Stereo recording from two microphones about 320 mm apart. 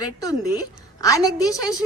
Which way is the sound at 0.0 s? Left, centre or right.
Centre.